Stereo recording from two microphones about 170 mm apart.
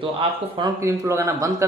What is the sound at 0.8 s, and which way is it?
Speech, 15° right (ahead or behind).